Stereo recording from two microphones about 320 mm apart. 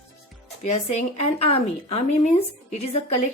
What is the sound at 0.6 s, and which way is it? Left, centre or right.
Speech, left.